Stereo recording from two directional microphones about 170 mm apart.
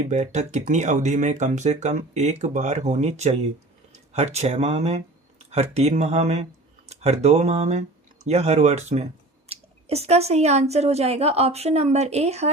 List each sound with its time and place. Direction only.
0.1 s speech: 45° right (ahead or behind)